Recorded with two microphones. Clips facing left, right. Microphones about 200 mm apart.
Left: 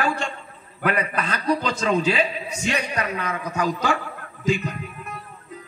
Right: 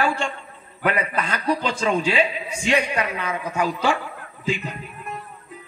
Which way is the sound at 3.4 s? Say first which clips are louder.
Right 4 dB; 10° right (ahead or behind).